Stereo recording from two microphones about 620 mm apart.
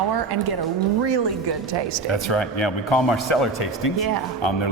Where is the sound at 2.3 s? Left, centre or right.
Left.